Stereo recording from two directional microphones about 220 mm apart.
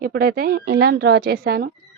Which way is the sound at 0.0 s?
40° right (ahead or behind).